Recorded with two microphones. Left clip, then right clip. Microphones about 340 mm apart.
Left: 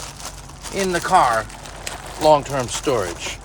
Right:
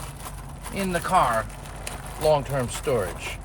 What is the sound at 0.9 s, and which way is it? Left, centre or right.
Speech, centre.